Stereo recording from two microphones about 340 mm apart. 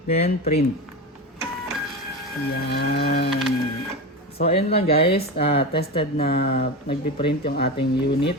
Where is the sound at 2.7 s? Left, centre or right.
Left.